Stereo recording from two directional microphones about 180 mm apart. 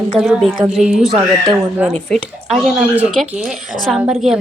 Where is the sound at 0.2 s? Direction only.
Centre (ahead or behind).